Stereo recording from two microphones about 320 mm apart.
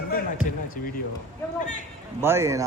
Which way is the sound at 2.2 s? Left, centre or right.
Centre.